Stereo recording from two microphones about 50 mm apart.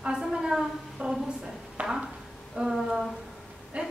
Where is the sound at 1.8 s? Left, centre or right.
Right.